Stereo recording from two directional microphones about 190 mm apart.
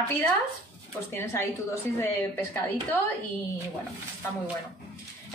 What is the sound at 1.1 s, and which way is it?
A woman's voice, 10° left (ahead or behind).